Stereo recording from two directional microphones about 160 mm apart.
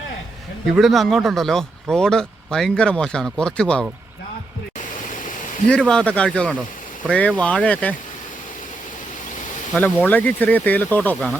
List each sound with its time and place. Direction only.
0.7 s speech: centre (ahead or behind)
5.6 s speech: 5° left (ahead or behind)
9.7 s speech: 10° left (ahead or behind)